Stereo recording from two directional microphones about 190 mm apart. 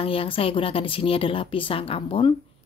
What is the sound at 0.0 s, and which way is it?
A woman's voice, 30° left (ahead or behind).